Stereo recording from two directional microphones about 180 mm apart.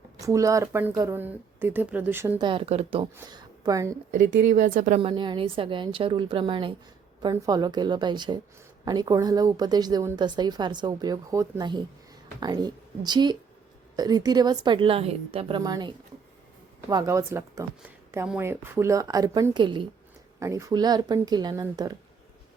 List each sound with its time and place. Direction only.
0.2 s a woman's voice: 15° right (ahead or behind)
2.4 s speech: 30° right (ahead or behind)
3.2 s a woman's voice: 20° right (ahead or behind)
4.1 s speech: 45° right (ahead or behind)
4.9 s a woman's voice: 30° right (ahead or behind)